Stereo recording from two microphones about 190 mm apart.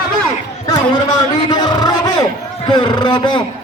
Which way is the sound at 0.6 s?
20° left (ahead or behind).